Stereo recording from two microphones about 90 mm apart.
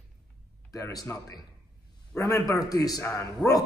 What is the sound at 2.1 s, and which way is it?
A man's voice, 40° left (ahead or behind).